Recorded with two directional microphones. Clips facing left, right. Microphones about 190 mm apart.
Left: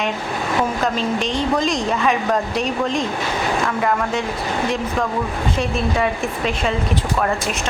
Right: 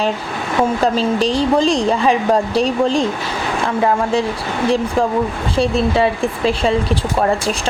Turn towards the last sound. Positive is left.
turn(degrees=-30)  # may be behind; listen again after turning